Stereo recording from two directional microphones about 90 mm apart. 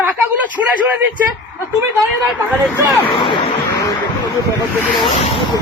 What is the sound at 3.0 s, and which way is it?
Speech, 75° left (ahead or behind).